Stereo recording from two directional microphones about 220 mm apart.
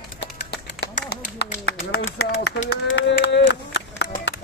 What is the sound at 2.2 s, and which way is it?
Clapping, 50° left (ahead or behind).